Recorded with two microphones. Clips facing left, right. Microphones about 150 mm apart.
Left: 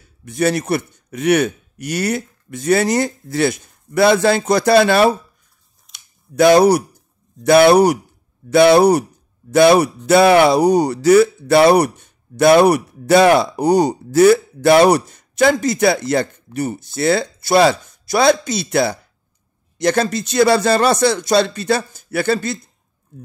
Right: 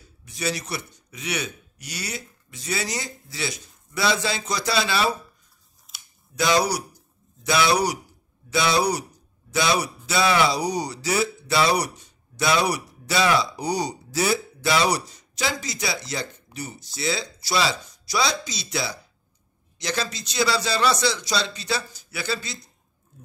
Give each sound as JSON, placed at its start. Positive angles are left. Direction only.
{"t": 0.2, "sound": "speech", "side_deg": 55}
{"t": 5.9, "sound": "a sound", "side_deg": -5}
{"t": 6.3, "sound": "speech", "side_deg": 55}